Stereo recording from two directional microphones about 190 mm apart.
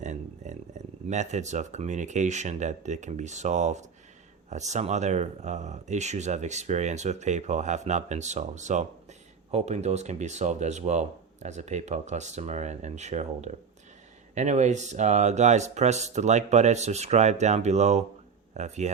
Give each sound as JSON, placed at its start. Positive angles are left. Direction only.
{"t": 0.0, "sound": "speech", "side_deg": -40}